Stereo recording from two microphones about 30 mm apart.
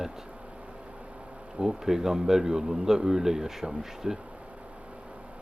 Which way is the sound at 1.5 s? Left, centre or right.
Centre.